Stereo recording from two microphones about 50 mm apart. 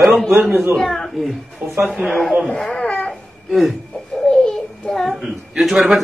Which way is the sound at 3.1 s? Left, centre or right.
Centre.